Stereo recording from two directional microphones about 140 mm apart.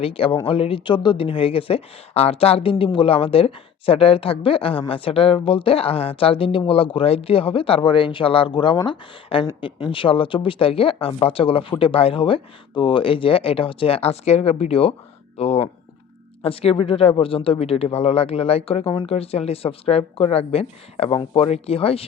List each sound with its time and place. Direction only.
0.0 s speech: 40° left (ahead or behind)